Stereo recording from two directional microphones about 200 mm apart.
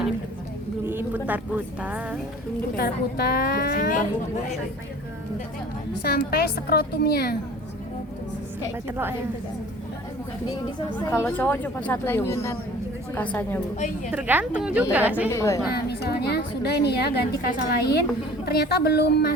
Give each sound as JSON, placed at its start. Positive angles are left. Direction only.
{"t": 0.9, "sound": "speech", "side_deg": -10}
{"t": 2.7, "sound": "a woman's voice", "side_deg": 50}
{"t": 6.0, "sound": "a woman's voice", "side_deg": 50}
{"t": 8.9, "sound": "a woman's voice", "side_deg": -10}
{"t": 10.5, "sound": "speech", "side_deg": 10}
{"t": 13.7, "sound": "a woman's voice", "side_deg": 35}
{"t": 14.1, "sound": "a woman's voice", "side_deg": -10}
{"t": 15.3, "sound": "speech", "side_deg": 15}
{"t": 15.7, "sound": "a woman's voice", "side_deg": 55}